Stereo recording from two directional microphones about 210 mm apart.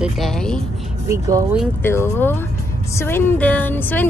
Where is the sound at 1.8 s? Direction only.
10° left (ahead or behind).